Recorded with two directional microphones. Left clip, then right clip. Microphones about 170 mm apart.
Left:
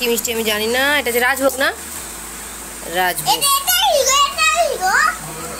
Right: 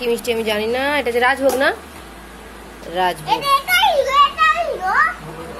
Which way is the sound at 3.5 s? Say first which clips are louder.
Right 4 dB; 60° left (ahead or behind).